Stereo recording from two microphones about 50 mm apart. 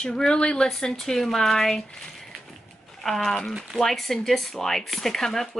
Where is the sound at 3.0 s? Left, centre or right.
Centre.